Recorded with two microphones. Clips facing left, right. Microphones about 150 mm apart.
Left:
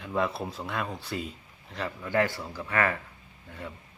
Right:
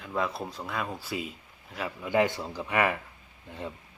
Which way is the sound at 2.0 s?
15° right (ahead or behind).